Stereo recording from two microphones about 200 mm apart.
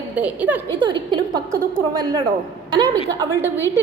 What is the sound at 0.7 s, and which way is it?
Speech, 25° right (ahead or behind).